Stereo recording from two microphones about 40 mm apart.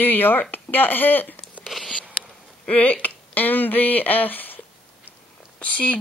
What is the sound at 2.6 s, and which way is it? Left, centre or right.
Speech, left.